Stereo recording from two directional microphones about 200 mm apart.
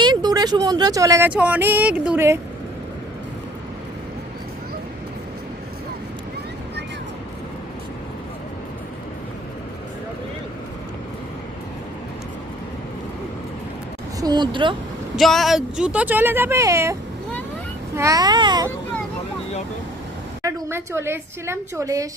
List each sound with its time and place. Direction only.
0.0 s speech: 20° right (ahead or behind)
14.2 s speech: 20° right (ahead or behind)
15.1 s speech: centre (ahead or behind); by 18.7 s 20° right (ahead or behind)
20.4 s speech: 10° right (ahead or behind)